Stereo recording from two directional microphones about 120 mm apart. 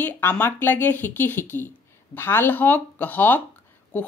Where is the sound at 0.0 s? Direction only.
20° left (ahead or behind).